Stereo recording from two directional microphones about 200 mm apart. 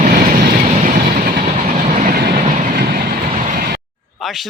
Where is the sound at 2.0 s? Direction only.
50° right (ahead or behind).